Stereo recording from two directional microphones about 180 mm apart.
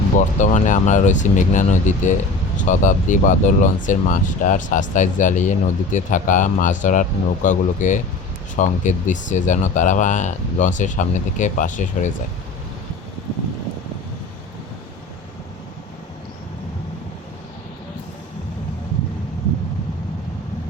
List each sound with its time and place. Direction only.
0.2 s speech: 45° left (ahead or behind)